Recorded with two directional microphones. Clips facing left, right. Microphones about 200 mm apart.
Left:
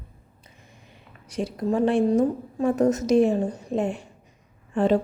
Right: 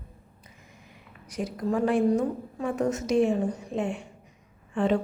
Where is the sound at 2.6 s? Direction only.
40° left (ahead or behind).